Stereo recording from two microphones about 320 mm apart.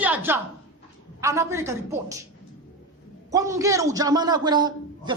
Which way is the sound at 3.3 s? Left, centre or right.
Centre.